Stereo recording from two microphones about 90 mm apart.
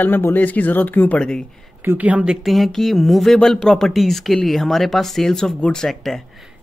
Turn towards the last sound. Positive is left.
turn(degrees=0)  # may be behind; listen again after turning